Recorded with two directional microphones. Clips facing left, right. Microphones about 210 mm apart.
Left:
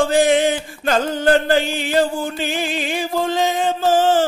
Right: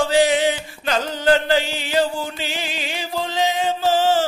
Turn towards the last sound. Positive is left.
turn(degrees=50)  # may be behind; listen again after turning